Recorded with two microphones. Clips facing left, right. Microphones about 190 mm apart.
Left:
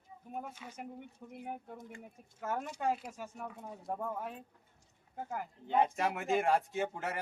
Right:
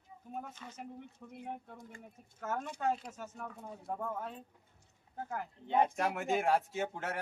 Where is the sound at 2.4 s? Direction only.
10° left (ahead or behind).